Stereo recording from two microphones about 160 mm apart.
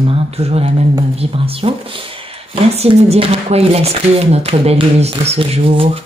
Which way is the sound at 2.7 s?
40° right (ahead or behind).